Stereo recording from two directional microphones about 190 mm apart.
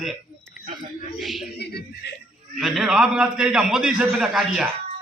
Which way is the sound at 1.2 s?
Centre (ahead or behind).